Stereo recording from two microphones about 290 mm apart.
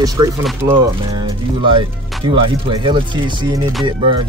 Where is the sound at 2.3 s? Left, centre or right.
Centre.